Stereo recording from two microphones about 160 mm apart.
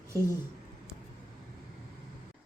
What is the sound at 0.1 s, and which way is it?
Speech, 20° right (ahead or behind).